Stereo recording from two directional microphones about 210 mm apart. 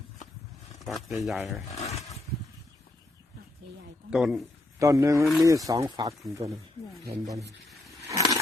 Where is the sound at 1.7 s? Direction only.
30° left (ahead or behind).